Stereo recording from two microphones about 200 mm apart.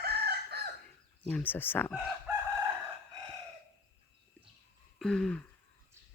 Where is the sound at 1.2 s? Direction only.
10° left (ahead or behind).